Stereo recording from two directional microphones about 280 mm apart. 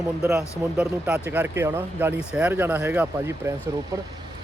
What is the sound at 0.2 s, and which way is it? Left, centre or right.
Speech, centre.